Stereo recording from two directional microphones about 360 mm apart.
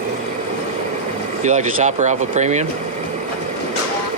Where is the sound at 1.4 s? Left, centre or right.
Centre.